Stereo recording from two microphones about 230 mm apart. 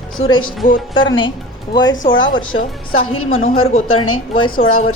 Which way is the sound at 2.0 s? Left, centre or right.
Left.